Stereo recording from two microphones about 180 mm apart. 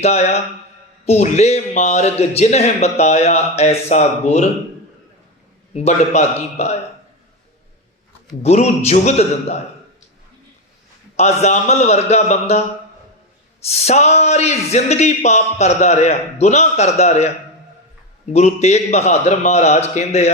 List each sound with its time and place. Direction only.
0.0 s speech: 35° left (ahead or behind)
5.7 s speech: 40° left (ahead or behind)
8.4 s speech: 40° left (ahead or behind)
11.2 s speech: 35° left (ahead or behind)
13.7 s speech: 35° left (ahead or behind)
18.3 s speech: 40° left (ahead or behind)